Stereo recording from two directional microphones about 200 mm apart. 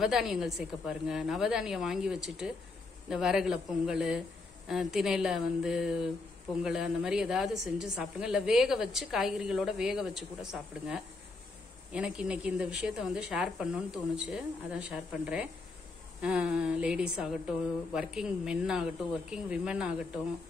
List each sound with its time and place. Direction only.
0.0 s a woman's voice: centre (ahead or behind)